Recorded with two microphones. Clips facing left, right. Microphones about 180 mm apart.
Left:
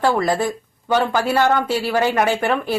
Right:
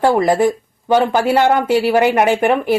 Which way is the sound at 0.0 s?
20° right (ahead or behind).